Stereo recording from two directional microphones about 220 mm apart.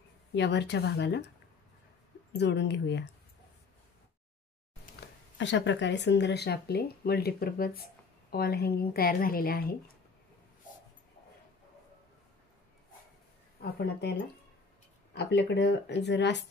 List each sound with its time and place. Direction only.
0.3 s speech: 50° left (ahead or behind)
2.3 s speech: 50° left (ahead or behind)
5.4 s speech: 55° left (ahead or behind)
13.6 s speech: 45° left (ahead or behind)
15.1 s speech: 50° left (ahead or behind)